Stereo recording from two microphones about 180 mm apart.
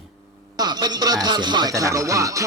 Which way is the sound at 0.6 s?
25° right (ahead or behind).